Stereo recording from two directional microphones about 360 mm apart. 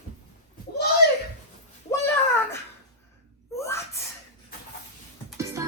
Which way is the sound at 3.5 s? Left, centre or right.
Centre.